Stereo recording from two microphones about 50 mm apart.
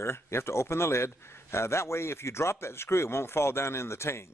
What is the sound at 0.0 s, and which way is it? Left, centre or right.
A man's voice, left.